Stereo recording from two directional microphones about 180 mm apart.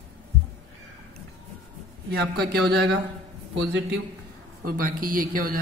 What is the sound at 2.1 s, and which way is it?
Speech, 65° right (ahead or behind).